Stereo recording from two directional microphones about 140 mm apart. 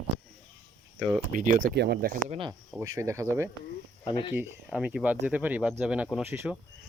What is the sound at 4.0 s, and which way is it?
Speech, 40° left (ahead or behind).